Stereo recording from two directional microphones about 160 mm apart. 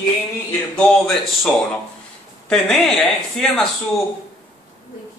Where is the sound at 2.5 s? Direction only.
5° left (ahead or behind).